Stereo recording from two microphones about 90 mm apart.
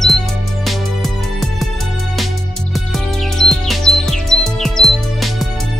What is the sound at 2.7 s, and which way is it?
Music, 5° left (ahead or behind).